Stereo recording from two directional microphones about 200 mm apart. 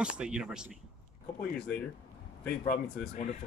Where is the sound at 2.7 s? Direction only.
40° left (ahead or behind).